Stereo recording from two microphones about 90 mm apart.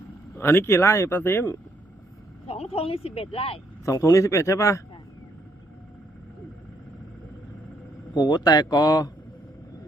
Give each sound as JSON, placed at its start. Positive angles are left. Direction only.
{"t": 0.3, "sound": "speech", "side_deg": 25}
{"t": 2.5, "sound": "speech", "side_deg": 90}
{"t": 3.8, "sound": "speech", "side_deg": 40}
{"t": 8.1, "sound": "speech", "side_deg": 50}